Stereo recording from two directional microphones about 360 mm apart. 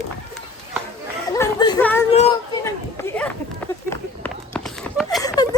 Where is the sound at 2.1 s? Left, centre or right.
Centre.